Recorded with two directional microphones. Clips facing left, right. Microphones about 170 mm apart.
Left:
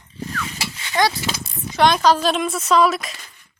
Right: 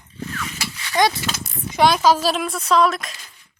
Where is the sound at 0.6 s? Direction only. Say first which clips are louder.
Left 1 dB; 25° left (ahead or behind).